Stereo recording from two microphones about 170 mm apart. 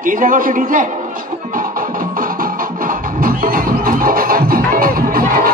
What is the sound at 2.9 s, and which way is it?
Music, 55° right (ahead or behind).